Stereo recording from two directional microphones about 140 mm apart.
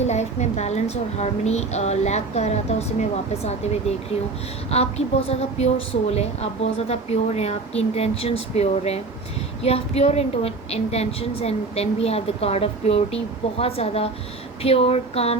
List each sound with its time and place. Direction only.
0.0 s a woman's voice: 55° left (ahead or behind)